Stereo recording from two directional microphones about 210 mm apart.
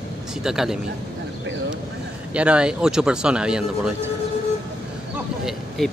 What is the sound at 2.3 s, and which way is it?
Speech, 5° right (ahead or behind).